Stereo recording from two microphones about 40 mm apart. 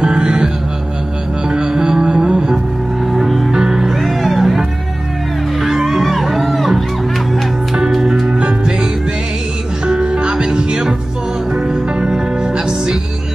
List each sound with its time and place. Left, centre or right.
0.0 s music: right
1.5 s music: centre
3.1 s music: centre
3.5 s music: centre
4.0 s music: centre
7.9 s music: centre
8.4 s music: right
9.8 s music: right